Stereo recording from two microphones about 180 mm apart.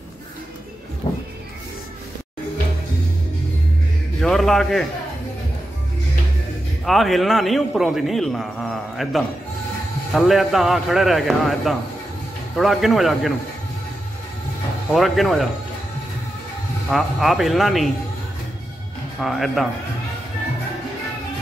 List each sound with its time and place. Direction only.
1.0 s music: 20° left (ahead or behind)
4.2 s a man's voice: centre (ahead or behind)
6.8 s a man's voice: centre (ahead or behind)
14.9 s a man's voice: centre (ahead or behind)
16.9 s a man's voice: centre (ahead or behind)
19.2 s a man's voice: centre (ahead or behind)